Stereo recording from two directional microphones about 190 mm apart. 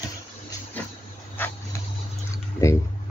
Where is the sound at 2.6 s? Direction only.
15° left (ahead or behind).